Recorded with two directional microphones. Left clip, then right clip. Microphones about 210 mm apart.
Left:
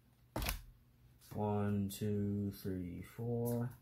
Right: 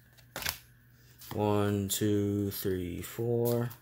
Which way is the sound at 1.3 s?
50° right (ahead or behind).